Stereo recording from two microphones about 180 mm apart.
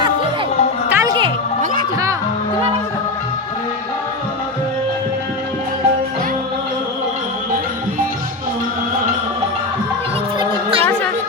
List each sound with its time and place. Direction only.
0.9 s music: 15° right (ahead or behind)